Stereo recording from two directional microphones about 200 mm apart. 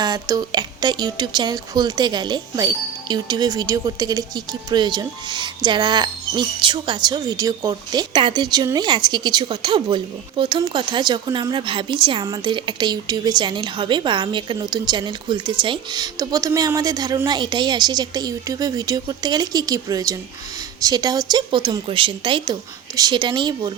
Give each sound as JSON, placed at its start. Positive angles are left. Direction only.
{"t": 0.0, "sound": "speech", "side_deg": -20}